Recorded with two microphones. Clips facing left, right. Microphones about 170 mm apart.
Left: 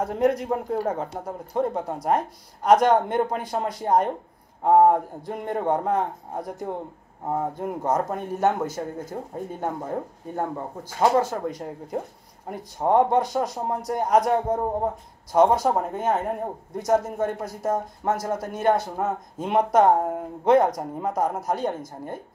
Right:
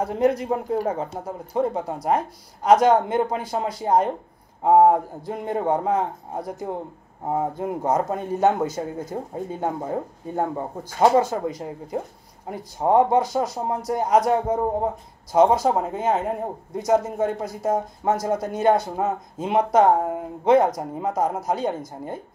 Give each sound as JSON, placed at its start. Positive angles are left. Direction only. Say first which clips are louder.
{"t": 0.0, "sound": "speech", "louder": "right 1 dB", "side_deg": 0}
{"t": 11.4, "sound": "speech", "louder": "right 2 dB", "side_deg": -5}